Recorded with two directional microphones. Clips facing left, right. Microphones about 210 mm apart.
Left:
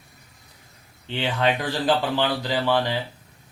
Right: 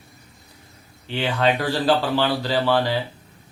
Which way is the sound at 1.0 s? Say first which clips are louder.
Right 2 dB; 20° left (ahead or behind).